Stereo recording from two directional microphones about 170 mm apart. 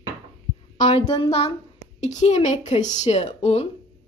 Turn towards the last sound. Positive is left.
turn(degrees=40)  # may be behind; listen again after turning